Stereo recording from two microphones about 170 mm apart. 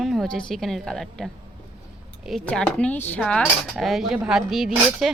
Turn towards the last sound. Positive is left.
turn(degrees=0)  # may be behind; listen again after turning